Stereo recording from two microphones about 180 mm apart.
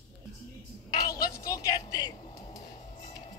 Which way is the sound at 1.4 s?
20° left (ahead or behind).